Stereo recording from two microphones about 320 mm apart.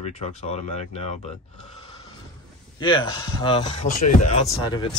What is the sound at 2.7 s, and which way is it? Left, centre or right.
Speech, centre.